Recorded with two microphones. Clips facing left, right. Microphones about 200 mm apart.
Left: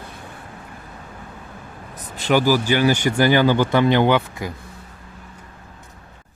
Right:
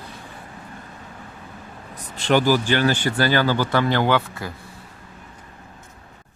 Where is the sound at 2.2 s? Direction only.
10° left (ahead or behind).